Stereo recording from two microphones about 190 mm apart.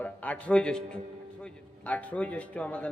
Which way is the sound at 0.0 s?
10° left (ahead or behind).